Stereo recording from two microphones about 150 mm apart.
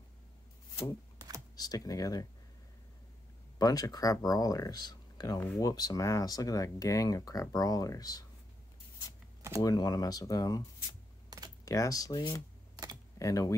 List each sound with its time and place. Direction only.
1.6 s speech: 25° left (ahead or behind)
3.5 s speech: 25° left (ahead or behind)
9.6 s speech: 25° left (ahead or behind)
11.2 s typing: 25° right (ahead or behind)
11.6 s speech: 20° left (ahead or behind)